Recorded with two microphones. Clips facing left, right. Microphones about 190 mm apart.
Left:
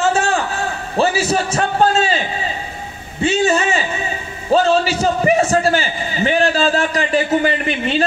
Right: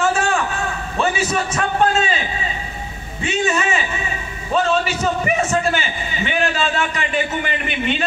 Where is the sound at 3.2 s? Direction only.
30° left (ahead or behind).